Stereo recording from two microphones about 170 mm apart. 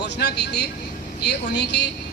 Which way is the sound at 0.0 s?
80° left.